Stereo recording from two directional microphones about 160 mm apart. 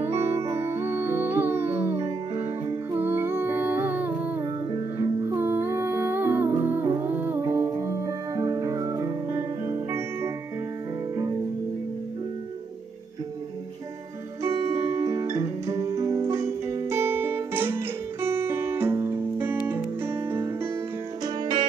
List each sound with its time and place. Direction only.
0.0 s music: 15° right (ahead or behind)
14.5 s music: 20° right (ahead or behind)